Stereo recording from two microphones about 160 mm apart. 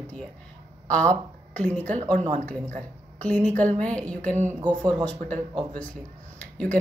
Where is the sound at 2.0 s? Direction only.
50° right (ahead or behind).